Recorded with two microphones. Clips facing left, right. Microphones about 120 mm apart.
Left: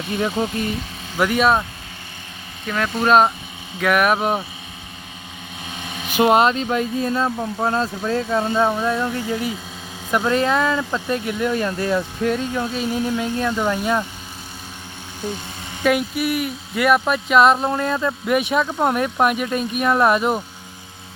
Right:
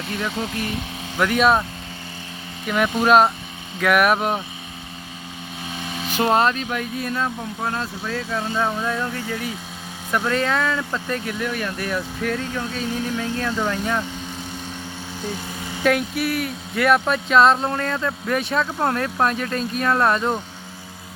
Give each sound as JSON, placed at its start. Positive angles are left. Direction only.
{"t": 0.2, "sound": "speech", "side_deg": 25}
{"t": 1.2, "sound": "speech", "side_deg": 0}
{"t": 2.6, "sound": "speech", "side_deg": -10}
{"t": 6.1, "sound": "speech", "side_deg": 15}
{"t": 15.8, "sound": "speech", "side_deg": 5}